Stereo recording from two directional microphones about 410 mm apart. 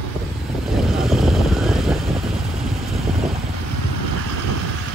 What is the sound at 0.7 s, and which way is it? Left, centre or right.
Vehicle, centre.